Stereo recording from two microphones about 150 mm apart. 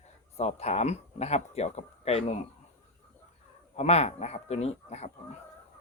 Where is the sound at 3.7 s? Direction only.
45° left (ahead or behind).